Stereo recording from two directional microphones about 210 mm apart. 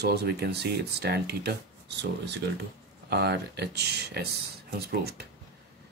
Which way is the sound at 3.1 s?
50° right (ahead or behind).